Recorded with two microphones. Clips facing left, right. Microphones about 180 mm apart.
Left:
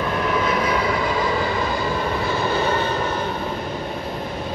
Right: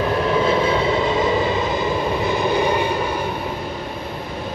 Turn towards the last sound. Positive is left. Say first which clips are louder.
# right 2 dB
turn(degrees=-10)  # may be behind; listen again after turning